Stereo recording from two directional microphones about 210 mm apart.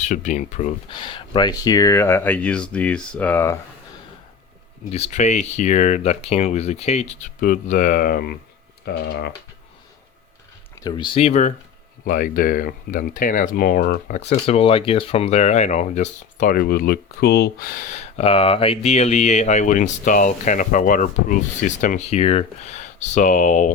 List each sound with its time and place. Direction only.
0.0 s speech: 35° left (ahead or behind)
0.9 s speech: 20° left (ahead or behind)
4.9 s speech: 30° left (ahead or behind); by 9.3 s 50° left (ahead or behind)
10.8 s speech: 20° left (ahead or behind); by 14.2 s 45° left (ahead or behind)
14.2 s speech: 30° left (ahead or behind)